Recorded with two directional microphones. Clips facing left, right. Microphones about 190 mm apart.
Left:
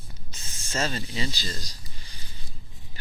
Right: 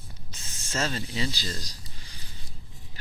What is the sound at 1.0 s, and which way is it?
Speech, centre (ahead or behind).